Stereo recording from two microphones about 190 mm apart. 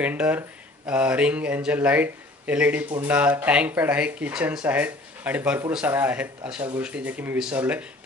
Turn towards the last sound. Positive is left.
turn(degrees=-10)  # may be behind; listen again after turning